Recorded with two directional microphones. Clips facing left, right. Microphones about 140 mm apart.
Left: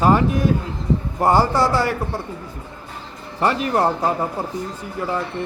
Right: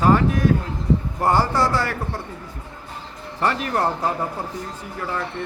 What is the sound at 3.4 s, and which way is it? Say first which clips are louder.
Speech: left 3 dB; 15° left (ahead or behind).